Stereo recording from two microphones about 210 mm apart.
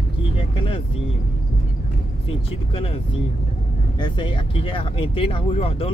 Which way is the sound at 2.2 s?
25° left (ahead or behind).